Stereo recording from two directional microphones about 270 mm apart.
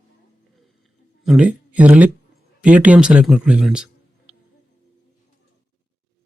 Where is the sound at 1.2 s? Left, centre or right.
Centre.